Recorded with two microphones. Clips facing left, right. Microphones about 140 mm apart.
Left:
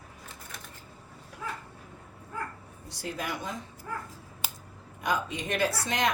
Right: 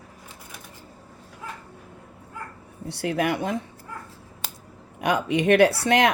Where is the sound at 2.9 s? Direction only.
65° right (ahead or behind).